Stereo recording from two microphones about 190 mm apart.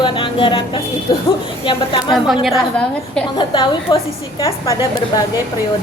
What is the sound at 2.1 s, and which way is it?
A woman's voice, centre (ahead or behind).